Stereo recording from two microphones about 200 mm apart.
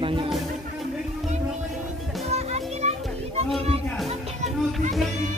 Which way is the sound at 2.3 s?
30° right (ahead or behind).